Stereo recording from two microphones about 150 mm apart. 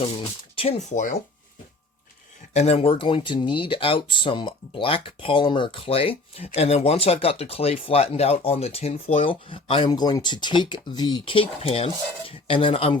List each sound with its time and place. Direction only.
0.6 s speech: 40° left (ahead or behind)
0.9 s speech: 60° left (ahead or behind)
2.5 s speech: 45° left (ahead or behind)